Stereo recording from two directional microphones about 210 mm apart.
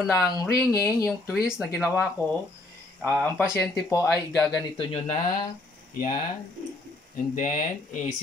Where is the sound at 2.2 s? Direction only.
15° left (ahead or behind).